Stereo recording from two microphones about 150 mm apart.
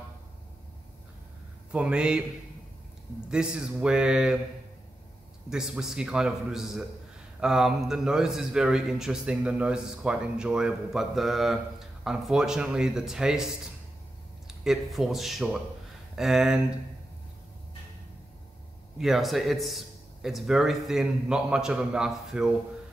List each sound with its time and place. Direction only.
1.7 s a man's voice: 5° right (ahead or behind)
3.3 s a man's voice: 5° right (ahead or behind)
5.5 s a man's voice: 5° right (ahead or behind)
14.5 s a man's voice: centre (ahead or behind)
18.9 s a man's voice: centre (ahead or behind)